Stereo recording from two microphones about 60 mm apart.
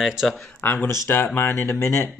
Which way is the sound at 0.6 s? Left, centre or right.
Left.